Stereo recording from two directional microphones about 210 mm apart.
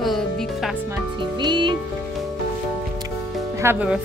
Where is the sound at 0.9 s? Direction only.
20° right (ahead or behind).